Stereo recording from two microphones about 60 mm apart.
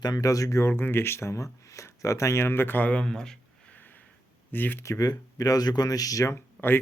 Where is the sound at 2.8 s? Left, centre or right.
Centre.